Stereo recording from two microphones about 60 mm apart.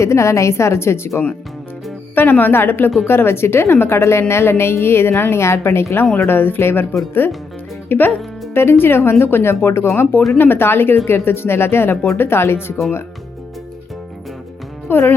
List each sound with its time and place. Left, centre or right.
0.0 s a woman's voice: left
2.1 s a woman's voice: left
14.8 s speech: left